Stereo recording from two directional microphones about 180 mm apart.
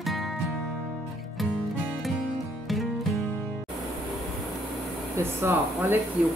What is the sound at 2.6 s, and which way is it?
Music, centre (ahead or behind).